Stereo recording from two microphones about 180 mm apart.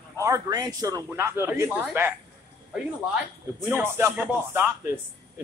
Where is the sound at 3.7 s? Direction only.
10° right (ahead or behind).